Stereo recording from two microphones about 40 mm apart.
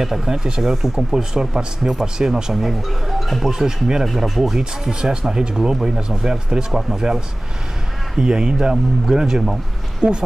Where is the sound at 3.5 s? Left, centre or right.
Centre.